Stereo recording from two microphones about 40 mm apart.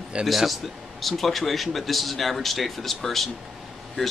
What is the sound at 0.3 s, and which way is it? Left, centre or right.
Speech, centre.